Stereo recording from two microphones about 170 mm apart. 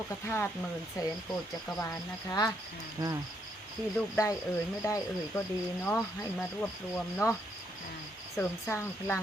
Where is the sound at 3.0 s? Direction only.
20° right (ahead or behind).